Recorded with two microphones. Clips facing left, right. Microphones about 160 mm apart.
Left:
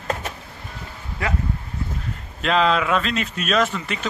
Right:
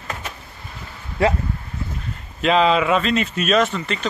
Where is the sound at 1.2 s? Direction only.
30° right (ahead or behind).